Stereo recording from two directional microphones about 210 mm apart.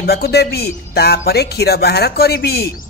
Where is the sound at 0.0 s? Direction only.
50° left (ahead or behind).